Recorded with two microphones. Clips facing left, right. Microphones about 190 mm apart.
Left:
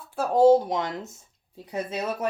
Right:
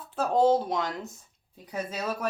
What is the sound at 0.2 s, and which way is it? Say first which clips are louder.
Speech: left 5 dB; 10° left (ahead or behind).